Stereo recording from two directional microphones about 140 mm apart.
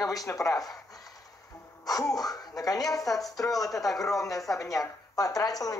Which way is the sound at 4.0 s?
25° left (ahead or behind).